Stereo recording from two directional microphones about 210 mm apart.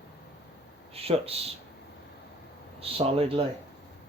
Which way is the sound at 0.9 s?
30° right (ahead or behind).